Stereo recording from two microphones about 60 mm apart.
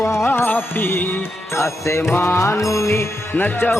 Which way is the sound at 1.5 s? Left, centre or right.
Left.